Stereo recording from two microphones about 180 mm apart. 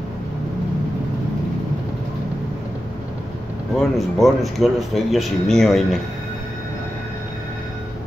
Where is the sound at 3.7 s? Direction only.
Centre (ahead or behind).